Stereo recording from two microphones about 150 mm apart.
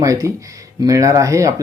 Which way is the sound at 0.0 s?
20° right (ahead or behind).